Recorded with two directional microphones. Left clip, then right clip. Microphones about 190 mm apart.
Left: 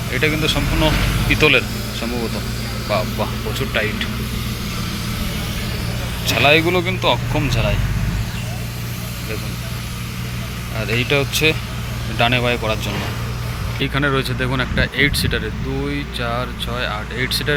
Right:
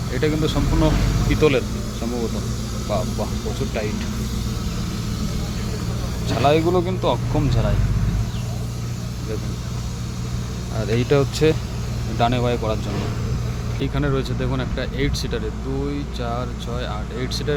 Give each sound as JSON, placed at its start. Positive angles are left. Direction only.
{"t": 0.1, "sound": "speech", "side_deg": -15}
{"t": 0.4, "sound": "speech", "side_deg": -25}
{"t": 1.3, "sound": "speech", "side_deg": -10}
{"t": 3.8, "sound": "speech", "side_deg": -5}
{"t": 6.2, "sound": "speech", "side_deg": -10}
{"t": 10.8, "sound": "speech", "side_deg": -25}
{"t": 12.1, "sound": "speech", "side_deg": -15}
{"t": 13.7, "sound": "speech", "side_deg": 0}